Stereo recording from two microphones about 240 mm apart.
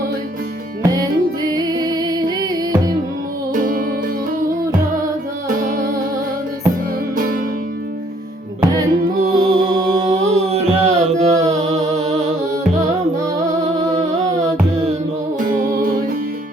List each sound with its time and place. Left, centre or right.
0.8 s music: centre
3.5 s music: right
8.6 s music: centre
10.2 s a sound: right
11.6 s humming: right